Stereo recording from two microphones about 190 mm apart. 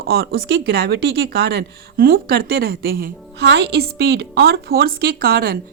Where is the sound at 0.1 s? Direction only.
55° right (ahead or behind).